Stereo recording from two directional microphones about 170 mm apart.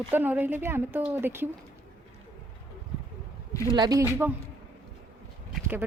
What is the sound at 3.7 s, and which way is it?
Speech, 25° right (ahead or behind).